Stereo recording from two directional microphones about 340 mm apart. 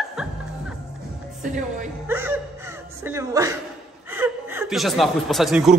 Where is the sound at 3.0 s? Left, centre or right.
Centre.